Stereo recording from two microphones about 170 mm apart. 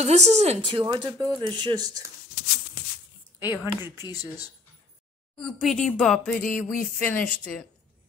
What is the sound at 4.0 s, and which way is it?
Speech, 20° left (ahead or behind).